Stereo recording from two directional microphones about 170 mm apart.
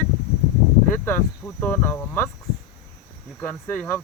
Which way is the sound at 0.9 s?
15° left (ahead or behind).